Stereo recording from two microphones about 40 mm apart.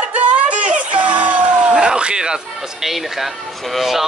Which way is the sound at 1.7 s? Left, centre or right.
Centre.